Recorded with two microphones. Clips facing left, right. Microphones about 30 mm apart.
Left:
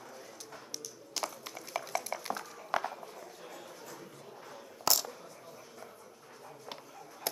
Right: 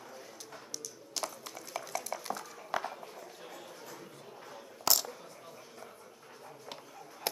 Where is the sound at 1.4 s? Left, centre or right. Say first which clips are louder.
Left 2 dB; centre.